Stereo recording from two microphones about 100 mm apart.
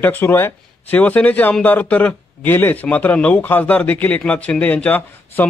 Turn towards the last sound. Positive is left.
turn(degrees=20)  # may be behind; listen again after turning